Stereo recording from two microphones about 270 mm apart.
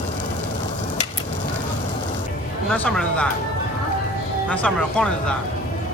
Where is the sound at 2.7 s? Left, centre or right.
Centre.